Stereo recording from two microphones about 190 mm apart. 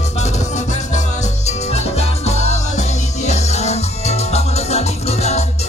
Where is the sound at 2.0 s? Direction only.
35° left (ahead or behind).